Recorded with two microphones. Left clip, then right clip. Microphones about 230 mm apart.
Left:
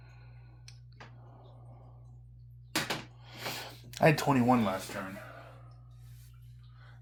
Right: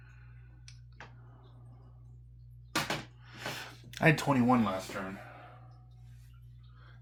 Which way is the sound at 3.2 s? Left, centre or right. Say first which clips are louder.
Left 2 dB; left.